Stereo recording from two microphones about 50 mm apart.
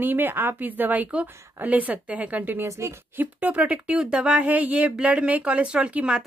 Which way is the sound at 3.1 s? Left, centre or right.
Right.